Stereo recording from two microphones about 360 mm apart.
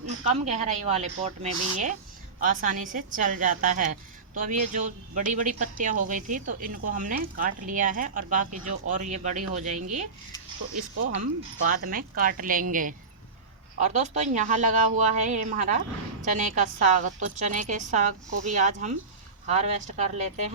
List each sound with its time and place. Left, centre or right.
0.4 s speech: centre
11.7 s speech: right